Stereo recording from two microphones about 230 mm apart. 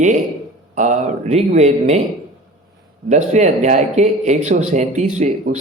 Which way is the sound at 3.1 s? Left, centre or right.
Right.